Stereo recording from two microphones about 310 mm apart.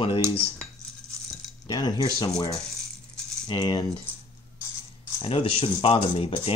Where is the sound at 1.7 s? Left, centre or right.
Centre.